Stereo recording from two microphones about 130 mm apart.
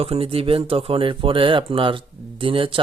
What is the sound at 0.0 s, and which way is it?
Speech, 50° right (ahead or behind).